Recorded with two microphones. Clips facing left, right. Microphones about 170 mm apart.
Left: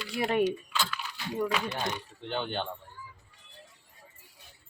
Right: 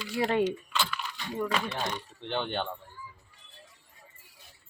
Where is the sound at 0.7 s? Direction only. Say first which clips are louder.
Right 1 dB; centre (ahead or behind).